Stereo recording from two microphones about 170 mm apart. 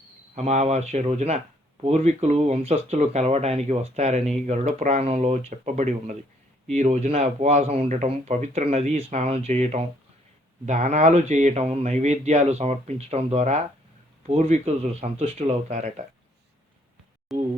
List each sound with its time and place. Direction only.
0.3 s speech: 40° right (ahead or behind)
17.3 s speech: centre (ahead or behind)